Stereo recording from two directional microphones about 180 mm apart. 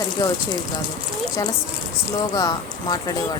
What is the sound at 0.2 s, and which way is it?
Speech, 20° left (ahead or behind).